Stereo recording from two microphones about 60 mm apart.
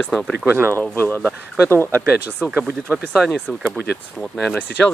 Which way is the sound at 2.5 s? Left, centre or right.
Right.